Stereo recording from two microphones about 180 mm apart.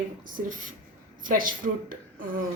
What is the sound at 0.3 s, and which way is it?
A woman's voice, 50° right (ahead or behind).